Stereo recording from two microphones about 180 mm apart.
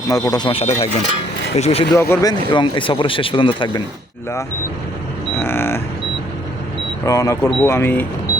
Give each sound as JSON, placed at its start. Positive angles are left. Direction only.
{"t": 0.1, "sound": "speech", "side_deg": 20}
{"t": 2.0, "sound": "speech", "side_deg": 15}
{"t": 5.4, "sound": "creak", "side_deg": 10}
{"t": 7.0, "sound": "speech", "side_deg": 20}